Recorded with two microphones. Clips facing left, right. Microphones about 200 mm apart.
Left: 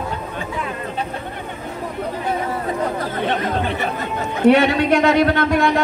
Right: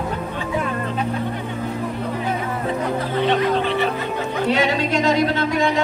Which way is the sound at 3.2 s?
50° left (ahead or behind).